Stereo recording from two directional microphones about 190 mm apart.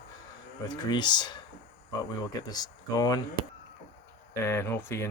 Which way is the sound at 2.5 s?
20° left (ahead or behind).